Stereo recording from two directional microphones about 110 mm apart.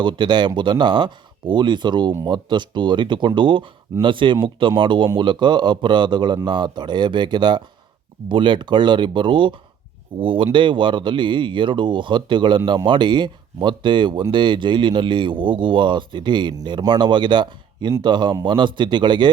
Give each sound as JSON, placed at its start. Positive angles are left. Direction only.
{"t": 0.0, "sound": "speech", "side_deg": -45}